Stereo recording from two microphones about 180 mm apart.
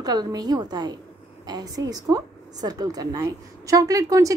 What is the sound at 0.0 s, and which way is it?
A woman's voice, 20° right (ahead or behind).